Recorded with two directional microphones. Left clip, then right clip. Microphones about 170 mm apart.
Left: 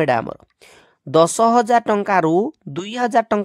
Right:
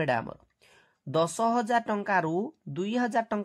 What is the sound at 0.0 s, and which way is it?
Speech, 45° left (ahead or behind).